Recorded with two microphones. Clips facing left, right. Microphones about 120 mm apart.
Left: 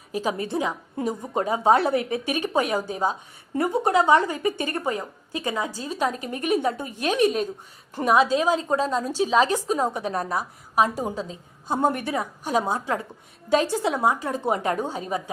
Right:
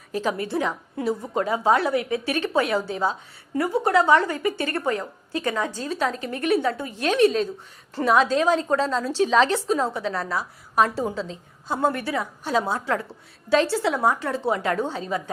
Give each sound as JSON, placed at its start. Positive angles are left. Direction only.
{"t": 0.1, "sound": "a woman's voice", "side_deg": 15}